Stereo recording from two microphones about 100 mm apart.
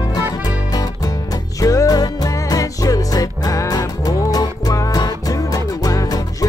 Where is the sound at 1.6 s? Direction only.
35° left (ahead or behind).